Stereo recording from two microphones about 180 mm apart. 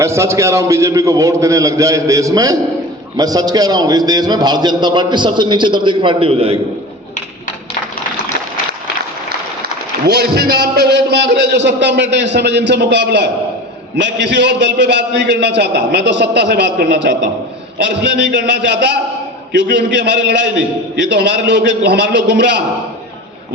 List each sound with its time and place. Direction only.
0.0 s a man's voice: 15° right (ahead or behind); by 6.6 s 35° right (ahead or behind)
10.1 s a man's voice: 65° right (ahead or behind)